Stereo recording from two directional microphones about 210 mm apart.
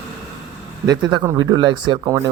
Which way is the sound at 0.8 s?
20° right (ahead or behind).